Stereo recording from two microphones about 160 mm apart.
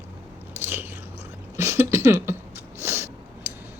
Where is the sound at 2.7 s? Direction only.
15° right (ahead or behind).